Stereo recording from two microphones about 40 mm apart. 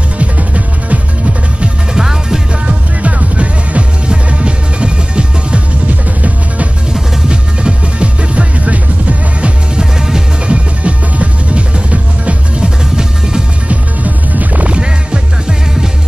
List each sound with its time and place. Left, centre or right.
0.2 s music: right
2.0 s music: centre
2.6 s music: right
6.9 s music: right
9.8 s music: centre
10.4 s music: right
12.6 s music: centre
13.7 s music: right